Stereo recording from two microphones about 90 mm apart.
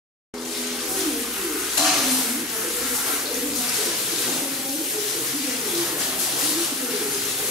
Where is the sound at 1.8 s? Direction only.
5° right (ahead or behind).